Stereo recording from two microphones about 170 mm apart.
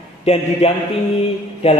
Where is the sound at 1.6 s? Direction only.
35° left (ahead or behind).